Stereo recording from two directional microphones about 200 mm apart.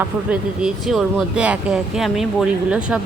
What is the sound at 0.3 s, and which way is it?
Speech, 5° right (ahead or behind).